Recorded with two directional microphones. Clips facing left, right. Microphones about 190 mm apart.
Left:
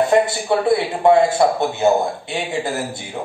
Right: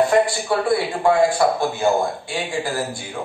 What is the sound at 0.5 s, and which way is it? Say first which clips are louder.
A man's voice: left 3 dB; 20° left (ahead or behind).